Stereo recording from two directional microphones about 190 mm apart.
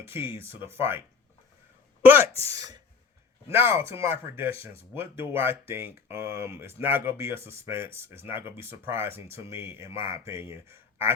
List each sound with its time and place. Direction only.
0.0 s speech: 10° right (ahead or behind)